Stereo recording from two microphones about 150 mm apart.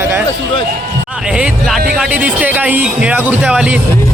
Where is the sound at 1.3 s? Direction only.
5° right (ahead or behind).